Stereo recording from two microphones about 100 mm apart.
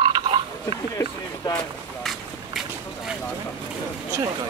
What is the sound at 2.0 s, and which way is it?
Run, centre (ahead or behind).